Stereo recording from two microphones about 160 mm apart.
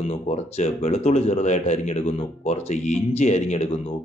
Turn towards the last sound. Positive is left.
turn(degrees=45)  # may be behind; listen again after turning